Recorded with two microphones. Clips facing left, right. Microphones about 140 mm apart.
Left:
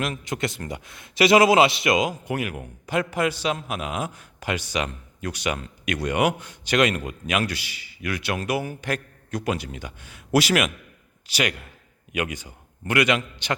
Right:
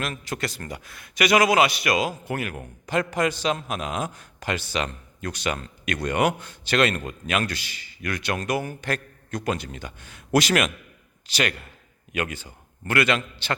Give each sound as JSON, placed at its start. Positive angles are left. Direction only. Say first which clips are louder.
{"t": 0.0, "sound": "a man's voice", "louder": "left 2 dB", "side_deg": 20}